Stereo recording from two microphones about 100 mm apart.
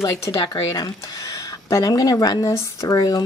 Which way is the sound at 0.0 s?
35° left (ahead or behind).